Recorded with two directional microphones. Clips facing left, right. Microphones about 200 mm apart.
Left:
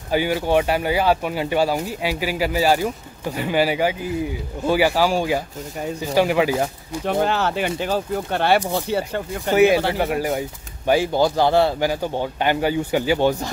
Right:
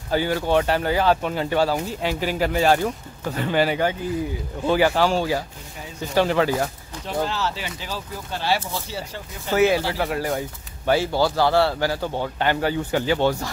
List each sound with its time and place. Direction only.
0.1 s a man's voice: 15° left (ahead or behind)
7.1 s speech: 55° left (ahead or behind)
9.5 s a man's voice: 15° left (ahead or behind)